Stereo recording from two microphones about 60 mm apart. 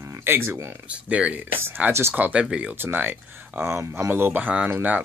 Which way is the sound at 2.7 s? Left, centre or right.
Right.